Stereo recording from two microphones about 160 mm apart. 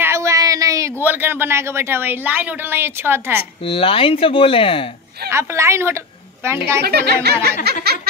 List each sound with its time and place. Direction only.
0.0 s speech: 15° right (ahead or behind)
3.6 s speech: 35° left (ahead or behind)
5.3 s a woman's voice: 15° right (ahead or behind)
6.8 s speech: 90° right
7.8 s a sound: 85° right